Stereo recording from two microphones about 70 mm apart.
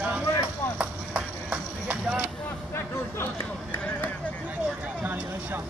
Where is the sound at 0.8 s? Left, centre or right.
Centre.